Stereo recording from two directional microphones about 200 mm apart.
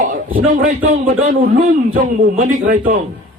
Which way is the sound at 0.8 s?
35° right (ahead or behind).